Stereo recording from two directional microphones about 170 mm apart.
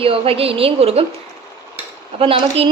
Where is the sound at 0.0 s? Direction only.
35° right (ahead or behind).